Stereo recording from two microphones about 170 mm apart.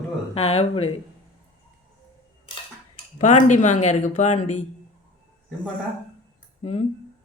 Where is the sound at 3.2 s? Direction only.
45° left (ahead or behind).